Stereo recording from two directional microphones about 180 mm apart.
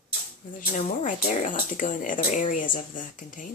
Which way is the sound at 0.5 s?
45° left (ahead or behind).